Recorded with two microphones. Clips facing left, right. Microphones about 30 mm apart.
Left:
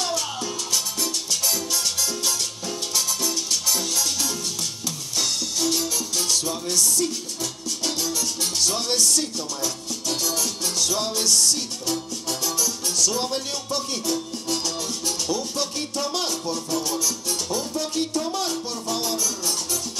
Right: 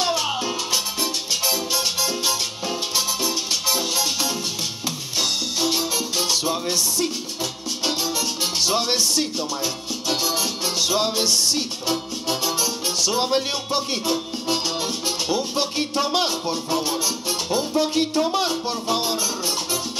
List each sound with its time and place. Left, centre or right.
0.0 s music: right